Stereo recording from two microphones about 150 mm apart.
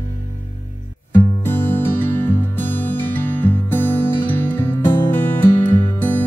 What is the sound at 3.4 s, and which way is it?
Music, 10° left (ahead or behind).